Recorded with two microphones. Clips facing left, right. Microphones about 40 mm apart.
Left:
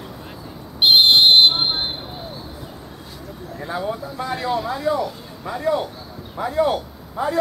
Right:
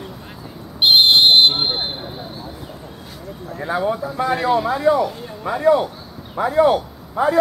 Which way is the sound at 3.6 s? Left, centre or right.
Centre.